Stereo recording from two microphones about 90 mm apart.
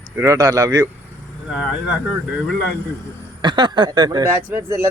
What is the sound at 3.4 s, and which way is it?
Speech, 55° right (ahead or behind).